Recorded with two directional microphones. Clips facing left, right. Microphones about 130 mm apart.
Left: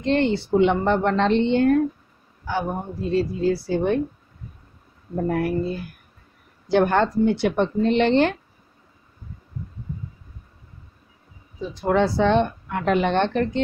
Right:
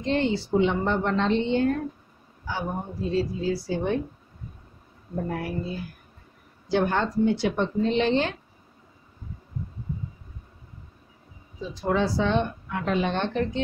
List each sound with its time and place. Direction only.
0.0 s speech: 65° left (ahead or behind)
5.3 s speech: 60° left (ahead or behind)
11.7 s speech: 60° left (ahead or behind)